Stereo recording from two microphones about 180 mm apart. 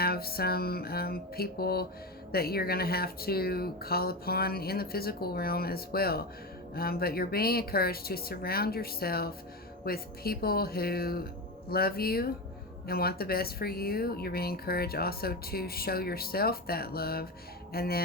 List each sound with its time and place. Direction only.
0.0 s speech: 60° left (ahead or behind)